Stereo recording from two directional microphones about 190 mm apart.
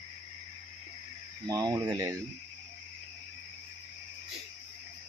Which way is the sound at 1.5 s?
20° right (ahead or behind).